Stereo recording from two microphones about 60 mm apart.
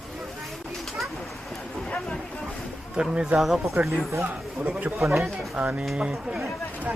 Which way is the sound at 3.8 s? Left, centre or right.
Right.